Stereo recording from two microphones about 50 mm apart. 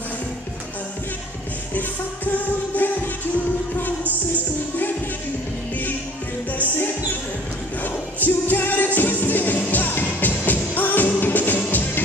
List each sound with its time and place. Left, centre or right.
1.7 s music: left
7.8 s music: left